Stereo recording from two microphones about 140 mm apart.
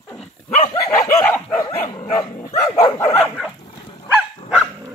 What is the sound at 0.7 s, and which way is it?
Dog, 15° left (ahead or behind).